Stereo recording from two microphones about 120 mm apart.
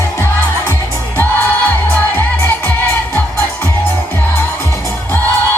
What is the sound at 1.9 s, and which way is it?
Music, 10° left (ahead or behind).